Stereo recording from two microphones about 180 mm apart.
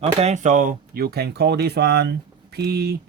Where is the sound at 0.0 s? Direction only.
35° right (ahead or behind).